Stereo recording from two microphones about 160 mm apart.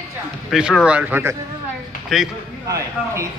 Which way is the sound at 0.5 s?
5° right (ahead or behind).